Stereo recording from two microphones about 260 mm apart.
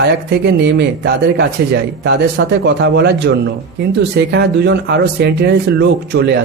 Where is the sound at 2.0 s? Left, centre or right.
Right.